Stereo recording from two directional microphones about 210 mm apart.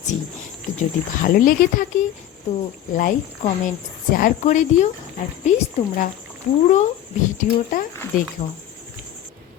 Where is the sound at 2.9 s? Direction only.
40° left (ahead or behind).